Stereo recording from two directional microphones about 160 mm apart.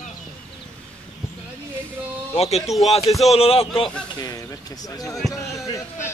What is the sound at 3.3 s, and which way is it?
Speech, 40° left (ahead or behind).